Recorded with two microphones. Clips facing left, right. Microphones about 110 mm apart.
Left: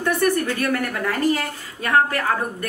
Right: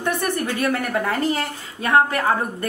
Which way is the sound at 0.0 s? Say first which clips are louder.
Left 3 dB; 20° right (ahead or behind).